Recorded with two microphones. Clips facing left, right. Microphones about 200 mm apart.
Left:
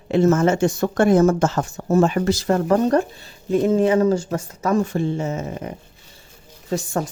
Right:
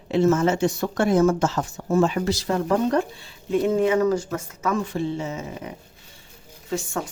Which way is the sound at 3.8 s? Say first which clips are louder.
Left 3 dB; 30° left (ahead or behind).